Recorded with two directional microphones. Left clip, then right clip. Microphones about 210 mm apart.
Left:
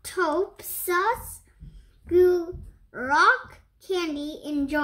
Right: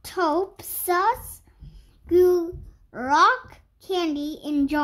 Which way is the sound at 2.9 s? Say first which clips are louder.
Right 1 dB; 45° right (ahead or behind).